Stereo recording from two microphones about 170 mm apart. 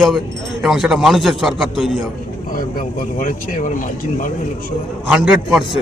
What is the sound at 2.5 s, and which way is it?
Speech, 55° left (ahead or behind).